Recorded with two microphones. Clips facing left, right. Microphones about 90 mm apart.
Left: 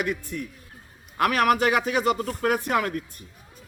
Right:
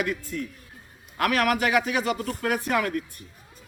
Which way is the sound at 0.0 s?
15° left (ahead or behind).